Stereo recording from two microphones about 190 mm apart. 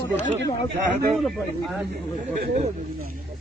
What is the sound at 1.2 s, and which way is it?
Speech, centre (ahead or behind).